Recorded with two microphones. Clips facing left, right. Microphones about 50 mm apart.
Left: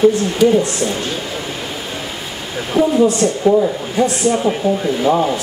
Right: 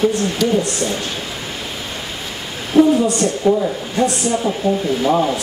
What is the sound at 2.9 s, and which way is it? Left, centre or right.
A woman's voice, centre.